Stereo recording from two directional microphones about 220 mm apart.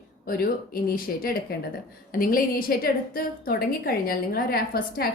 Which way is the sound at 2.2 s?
40° left (ahead or behind).